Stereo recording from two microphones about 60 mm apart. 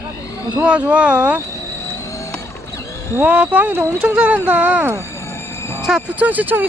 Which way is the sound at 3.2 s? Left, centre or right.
Right.